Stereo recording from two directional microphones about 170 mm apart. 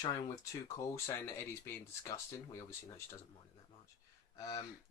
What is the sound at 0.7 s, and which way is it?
Speech, 15° left (ahead or behind).